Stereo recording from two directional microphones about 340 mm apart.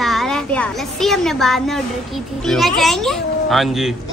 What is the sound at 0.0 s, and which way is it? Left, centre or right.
Speech, centre.